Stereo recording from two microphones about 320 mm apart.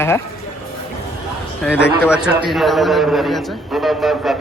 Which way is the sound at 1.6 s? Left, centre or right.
Centre.